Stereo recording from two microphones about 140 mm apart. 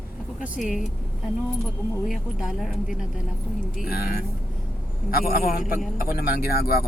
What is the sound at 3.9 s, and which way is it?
Speech, 90° left.